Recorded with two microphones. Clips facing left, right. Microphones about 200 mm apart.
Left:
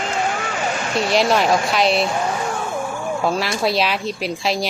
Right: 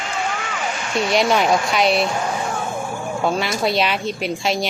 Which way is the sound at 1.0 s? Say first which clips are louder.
Even; centre (ahead or behind).